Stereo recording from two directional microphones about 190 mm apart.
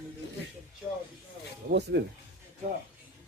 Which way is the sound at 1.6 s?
45° right (ahead or behind).